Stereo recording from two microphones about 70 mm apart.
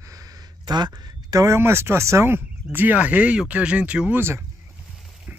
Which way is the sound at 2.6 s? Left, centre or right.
Right.